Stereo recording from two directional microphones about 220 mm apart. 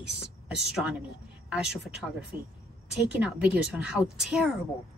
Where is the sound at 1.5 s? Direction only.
5° right (ahead or behind).